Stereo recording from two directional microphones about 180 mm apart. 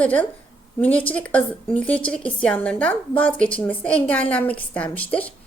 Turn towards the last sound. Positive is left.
turn(degrees=10)  # may be behind; listen again after turning